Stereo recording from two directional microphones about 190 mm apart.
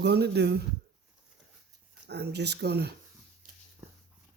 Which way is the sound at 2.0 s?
60° right (ahead or behind).